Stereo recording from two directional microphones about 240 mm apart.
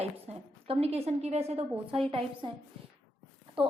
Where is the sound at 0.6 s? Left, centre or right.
Right.